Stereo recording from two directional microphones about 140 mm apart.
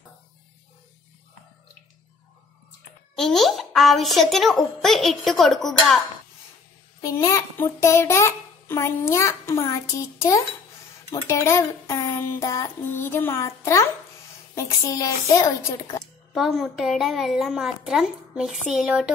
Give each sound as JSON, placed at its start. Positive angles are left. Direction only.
{"t": 3.2, "sound": "a woman's voice", "side_deg": 0}
{"t": 7.0, "sound": "a child's voice", "side_deg": 25}
{"t": 16.3, "sound": "a woman's voice", "side_deg": 0}